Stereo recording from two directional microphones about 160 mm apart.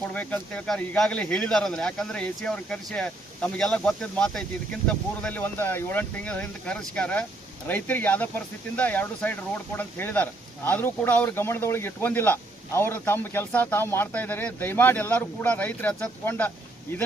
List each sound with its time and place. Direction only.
0.1 s speech: 10° left (ahead or behind)